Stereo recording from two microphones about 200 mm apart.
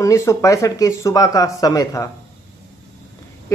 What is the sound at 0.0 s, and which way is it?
Speech, 15° left (ahead or behind).